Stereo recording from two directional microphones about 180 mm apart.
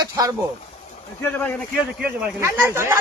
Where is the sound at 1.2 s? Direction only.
10° left (ahead or behind).